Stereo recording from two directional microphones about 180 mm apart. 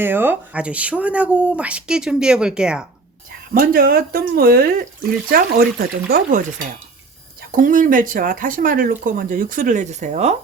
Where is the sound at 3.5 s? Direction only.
55° right (ahead or behind).